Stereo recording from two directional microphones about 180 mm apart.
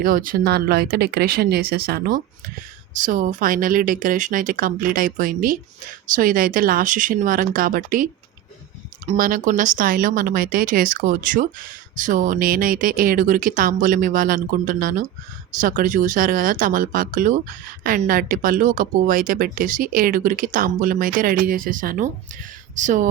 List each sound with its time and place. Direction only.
0.0 s speech: 50° right (ahead or behind)